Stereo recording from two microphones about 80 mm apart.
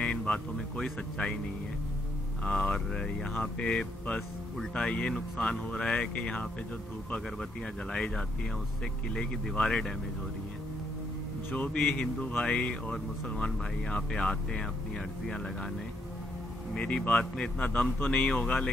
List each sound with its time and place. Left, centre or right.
0.0 s speech: centre
2.4 s speech: centre
9.1 s speech: centre
11.5 s speech: centre
16.7 s speech: centre